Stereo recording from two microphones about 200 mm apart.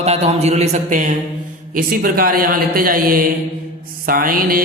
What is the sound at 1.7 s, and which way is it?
A man's voice, 45° right (ahead or behind).